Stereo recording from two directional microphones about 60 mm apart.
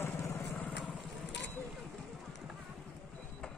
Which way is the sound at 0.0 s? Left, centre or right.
Left.